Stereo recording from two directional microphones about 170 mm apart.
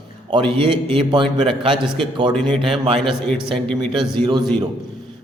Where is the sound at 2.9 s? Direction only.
5° left (ahead or behind).